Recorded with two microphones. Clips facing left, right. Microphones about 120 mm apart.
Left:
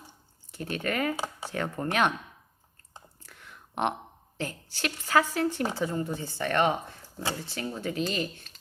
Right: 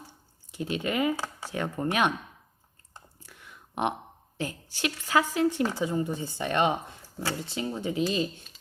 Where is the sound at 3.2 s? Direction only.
10° right (ahead or behind).